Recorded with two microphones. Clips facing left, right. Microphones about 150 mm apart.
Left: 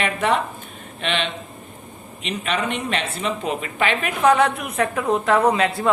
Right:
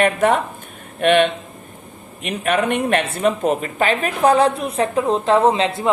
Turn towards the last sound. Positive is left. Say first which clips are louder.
# right 2 dB
turn(degrees=-25)  # may be behind; listen again after turning